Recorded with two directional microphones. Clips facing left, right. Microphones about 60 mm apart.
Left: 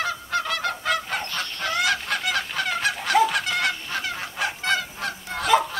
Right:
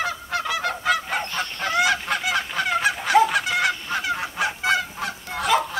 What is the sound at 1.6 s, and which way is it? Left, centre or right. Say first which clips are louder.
Goose: right 3 dB; centre.